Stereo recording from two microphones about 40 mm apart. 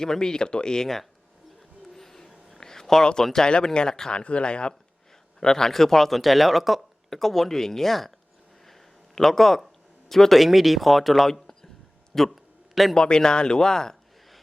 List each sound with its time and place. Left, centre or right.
0.0 s speech: centre
1.9 s music: centre
2.5 s a sound: centre
3.4 s speech: centre
4.2 s speech: left
5.4 s speech: centre
9.1 s speech: centre